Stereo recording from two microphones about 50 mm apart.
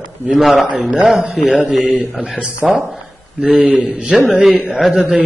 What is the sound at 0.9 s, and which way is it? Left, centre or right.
Speech, centre.